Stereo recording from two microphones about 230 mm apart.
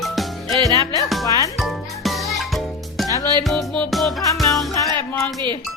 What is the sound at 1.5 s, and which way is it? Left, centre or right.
Music, centre.